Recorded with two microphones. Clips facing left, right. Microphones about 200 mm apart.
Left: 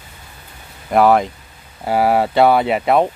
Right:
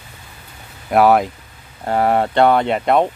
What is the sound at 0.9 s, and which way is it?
Speech, centre (ahead or behind).